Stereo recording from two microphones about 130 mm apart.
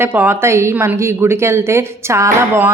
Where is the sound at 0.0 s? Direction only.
15° right (ahead or behind).